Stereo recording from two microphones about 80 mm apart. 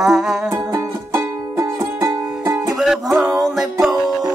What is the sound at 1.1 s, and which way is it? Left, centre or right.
Music, right.